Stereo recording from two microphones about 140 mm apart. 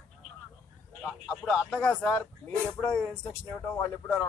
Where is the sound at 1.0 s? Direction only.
Centre (ahead or behind).